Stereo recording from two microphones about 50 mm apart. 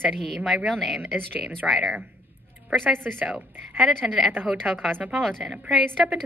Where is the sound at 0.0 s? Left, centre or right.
Centre.